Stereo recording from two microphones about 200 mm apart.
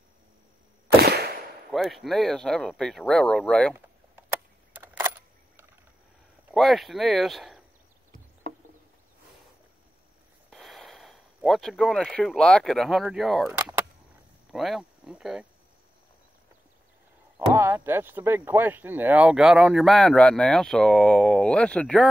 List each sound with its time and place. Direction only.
1.0 s a sound: 50° right (ahead or behind)
1.7 s speech: centre (ahead or behind)
4.7 s camera: 10° right (ahead or behind)
6.5 s speech: centre (ahead or behind)
10.5 s speech: centre (ahead or behind)
13.5 s cap gun: 10° right (ahead or behind)
14.5 s speech: centre (ahead or behind)
17.5 s speech: 10° right (ahead or behind); by 22.0 s 5° left (ahead or behind)